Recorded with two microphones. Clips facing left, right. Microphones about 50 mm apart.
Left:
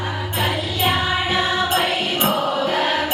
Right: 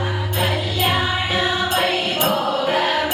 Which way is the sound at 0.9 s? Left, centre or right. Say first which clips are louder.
Left 2 dB; centre.